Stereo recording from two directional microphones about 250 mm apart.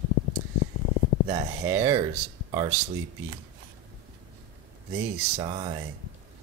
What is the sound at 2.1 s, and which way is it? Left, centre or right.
Speech, right.